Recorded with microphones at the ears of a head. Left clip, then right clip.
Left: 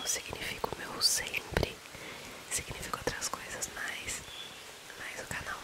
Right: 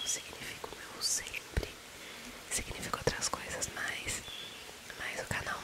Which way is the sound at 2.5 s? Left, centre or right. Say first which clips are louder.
Even; centre.